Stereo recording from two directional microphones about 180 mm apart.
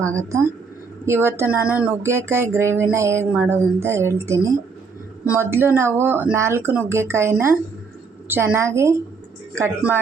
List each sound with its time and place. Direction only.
0.2 s speech: 15° right (ahead or behind)